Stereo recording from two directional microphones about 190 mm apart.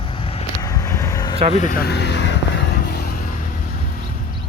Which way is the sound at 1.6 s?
50° left (ahead or behind).